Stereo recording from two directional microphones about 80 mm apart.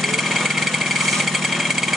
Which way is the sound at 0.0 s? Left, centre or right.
Centre.